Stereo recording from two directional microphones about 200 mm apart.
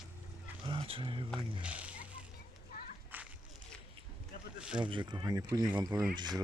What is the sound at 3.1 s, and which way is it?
Walk, 10° right (ahead or behind).